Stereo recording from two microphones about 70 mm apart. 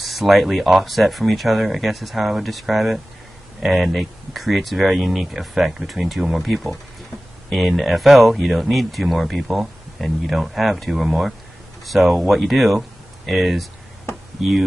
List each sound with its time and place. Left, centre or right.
0.0 s speech: centre